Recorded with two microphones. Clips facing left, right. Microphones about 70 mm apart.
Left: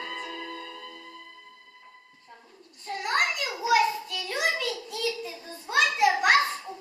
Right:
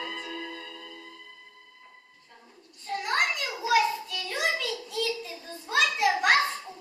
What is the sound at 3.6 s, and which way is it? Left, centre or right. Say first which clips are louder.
Child singing: left 1 dB; centre.